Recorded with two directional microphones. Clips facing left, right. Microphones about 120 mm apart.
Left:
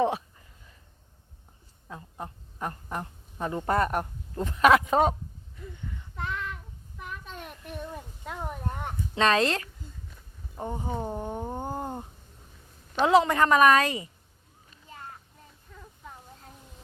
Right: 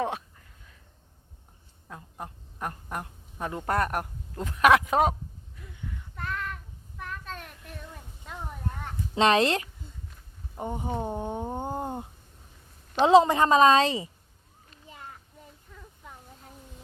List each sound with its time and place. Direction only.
0.0 s a sound: 5° left (ahead or behind)
1.9 s speech: centre (ahead or behind)
5.5 s a sound: centre (ahead or behind)
7.1 s child singing: 5° left (ahead or behind)
9.1 s a woman's voice: 25° right (ahead or behind)
13.1 s a woman's voice: 25° right (ahead or behind)